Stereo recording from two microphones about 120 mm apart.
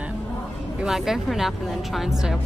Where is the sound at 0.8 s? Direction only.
5° right (ahead or behind).